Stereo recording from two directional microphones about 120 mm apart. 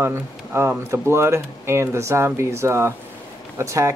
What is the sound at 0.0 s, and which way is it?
Speech, 20° right (ahead or behind).